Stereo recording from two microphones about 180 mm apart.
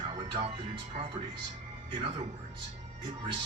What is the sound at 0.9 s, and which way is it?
Speech, 40° right (ahead or behind).